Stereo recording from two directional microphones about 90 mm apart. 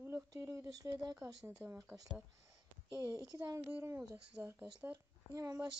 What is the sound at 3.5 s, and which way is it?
Speech, 15° right (ahead or behind).